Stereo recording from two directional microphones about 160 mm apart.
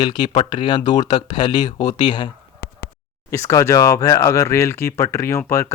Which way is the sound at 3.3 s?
20° left (ahead or behind).